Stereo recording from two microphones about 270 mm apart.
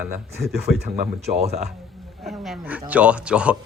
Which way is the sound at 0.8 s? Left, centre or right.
Right.